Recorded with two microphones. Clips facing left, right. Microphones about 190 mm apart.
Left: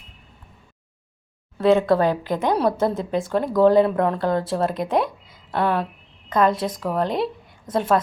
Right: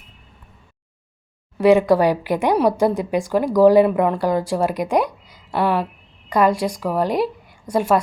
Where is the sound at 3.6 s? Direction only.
10° right (ahead or behind).